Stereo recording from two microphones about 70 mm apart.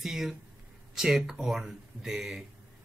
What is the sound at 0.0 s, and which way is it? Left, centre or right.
Speech, centre.